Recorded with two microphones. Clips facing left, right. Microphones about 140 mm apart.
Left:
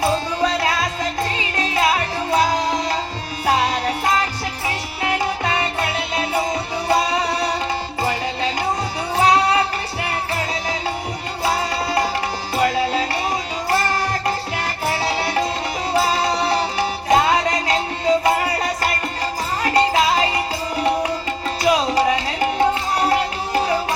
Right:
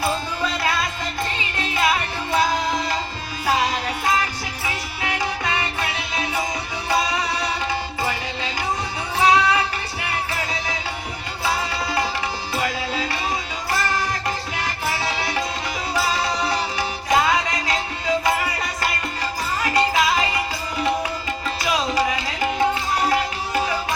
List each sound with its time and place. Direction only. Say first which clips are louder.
0.0 s music: left 5 dB; 35° left (ahead or behind)
5.0 s music: left 4 dB; 35° left (ahead or behind)
9.1 s music: left 2 dB; 35° left (ahead or behind)
11.4 s music: left 3 dB; 35° left (ahead or behind)